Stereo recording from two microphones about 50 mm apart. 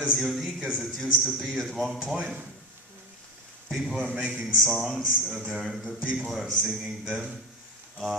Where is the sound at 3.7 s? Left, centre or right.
Centre.